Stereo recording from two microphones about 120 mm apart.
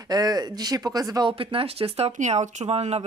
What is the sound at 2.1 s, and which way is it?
Speech, 85° right.